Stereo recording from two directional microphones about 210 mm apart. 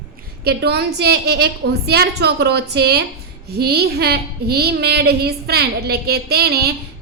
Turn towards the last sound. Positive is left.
turn(degrees=-50)  # may be behind; listen again after turning